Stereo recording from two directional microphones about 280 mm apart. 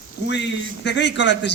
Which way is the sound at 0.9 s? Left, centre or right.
Left.